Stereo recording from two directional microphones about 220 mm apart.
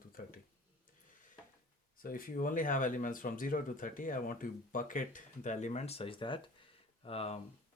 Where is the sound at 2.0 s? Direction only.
40° left (ahead or behind).